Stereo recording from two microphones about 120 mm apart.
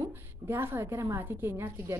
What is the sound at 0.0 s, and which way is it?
A woman's voice, 20° right (ahead or behind).